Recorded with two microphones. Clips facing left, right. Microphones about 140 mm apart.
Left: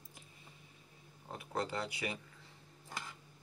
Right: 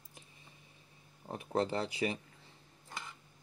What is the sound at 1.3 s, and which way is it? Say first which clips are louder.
Speech: right 6 dB; 25° right (ahead or behind).